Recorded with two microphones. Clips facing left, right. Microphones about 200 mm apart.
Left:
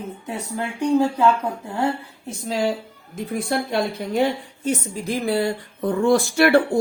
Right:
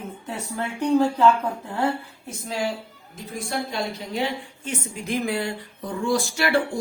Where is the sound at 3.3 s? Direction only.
60° left (ahead or behind); by 5.5 s 35° left (ahead or behind).